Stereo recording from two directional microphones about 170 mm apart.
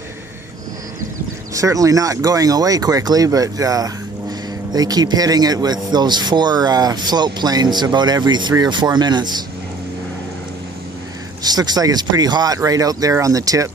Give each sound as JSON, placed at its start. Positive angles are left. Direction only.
{"t": 1.5, "sound": "speech", "side_deg": -20}
{"t": 11.4, "sound": "speech", "side_deg": -25}